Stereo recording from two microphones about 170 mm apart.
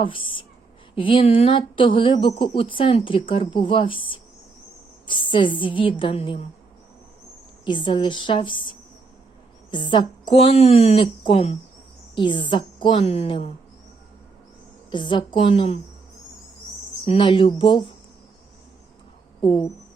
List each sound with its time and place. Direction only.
0.0 s a woman's voice: 30° left (ahead or behind)
7.6 s a woman's voice: 30° left (ahead or behind)
9.7 s a woman's voice: 30° left (ahead or behind)
14.8 s speech: 30° left (ahead or behind)
17.1 s speech: 30° left (ahead or behind)
19.4 s a woman's voice: 25° left (ahead or behind)